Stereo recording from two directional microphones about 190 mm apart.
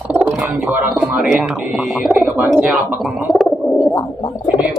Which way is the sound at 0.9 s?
5° right (ahead or behind).